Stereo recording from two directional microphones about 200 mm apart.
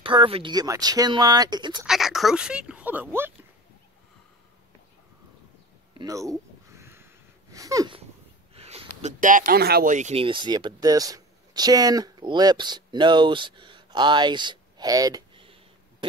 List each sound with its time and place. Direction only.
0.0 s speech: 25° right (ahead or behind)
1.9 s speech: centre (ahead or behind)
5.9 s a sound: 15° right (ahead or behind)
7.5 s wheeze: 15° right (ahead or behind)
8.5 s speech: 30° right (ahead or behind)